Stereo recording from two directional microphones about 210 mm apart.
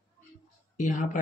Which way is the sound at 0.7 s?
35° left (ahead or behind).